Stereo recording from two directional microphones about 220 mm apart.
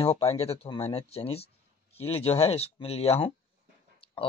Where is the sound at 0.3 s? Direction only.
25° left (ahead or behind).